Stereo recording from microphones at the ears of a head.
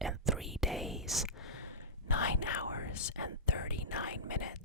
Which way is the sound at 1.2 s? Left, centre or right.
Left.